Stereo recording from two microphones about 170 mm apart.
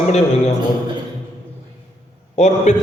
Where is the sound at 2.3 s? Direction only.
40° left (ahead or behind).